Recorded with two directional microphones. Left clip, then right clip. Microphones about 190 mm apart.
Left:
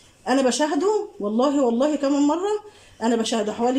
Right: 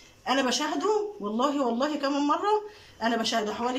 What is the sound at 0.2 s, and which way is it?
Speech, 30° left (ahead or behind).